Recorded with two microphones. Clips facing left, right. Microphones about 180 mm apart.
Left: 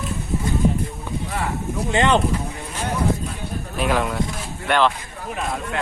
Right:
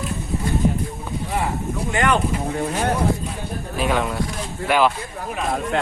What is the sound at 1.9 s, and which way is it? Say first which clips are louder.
Speech: left 2 dB; 25° left (ahead or behind).